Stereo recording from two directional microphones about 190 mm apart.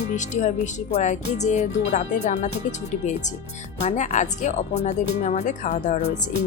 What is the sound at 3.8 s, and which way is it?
Speech, 35° left (ahead or behind).